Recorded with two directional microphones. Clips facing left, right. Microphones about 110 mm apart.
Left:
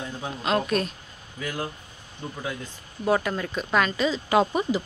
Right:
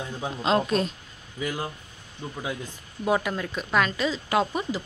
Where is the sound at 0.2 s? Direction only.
25° right (ahead or behind).